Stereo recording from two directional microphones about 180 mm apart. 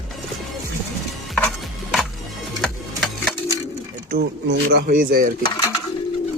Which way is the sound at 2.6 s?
5° left (ahead or behind).